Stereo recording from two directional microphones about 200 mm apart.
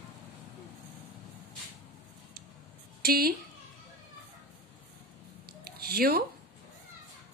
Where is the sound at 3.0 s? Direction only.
50° right (ahead or behind).